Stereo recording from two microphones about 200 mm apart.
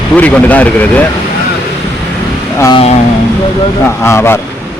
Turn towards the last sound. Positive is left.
turn(degrees=10)  # may be behind; listen again after turning